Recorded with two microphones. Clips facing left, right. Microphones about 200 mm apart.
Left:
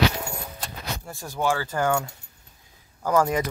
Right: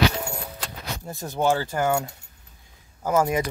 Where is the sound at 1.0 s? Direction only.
20° right (ahead or behind).